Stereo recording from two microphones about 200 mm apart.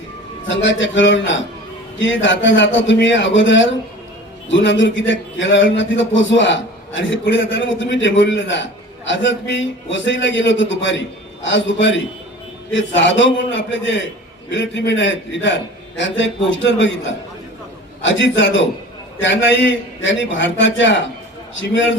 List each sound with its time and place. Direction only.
0.4 s a man's voice: 65° left (ahead or behind)